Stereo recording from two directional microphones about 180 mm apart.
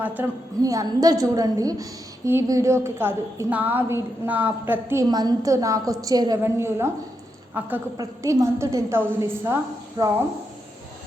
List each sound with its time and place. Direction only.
0.0 s a woman's voice: 10° right (ahead or behind)